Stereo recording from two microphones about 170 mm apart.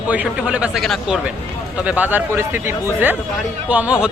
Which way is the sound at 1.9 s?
10° right (ahead or behind).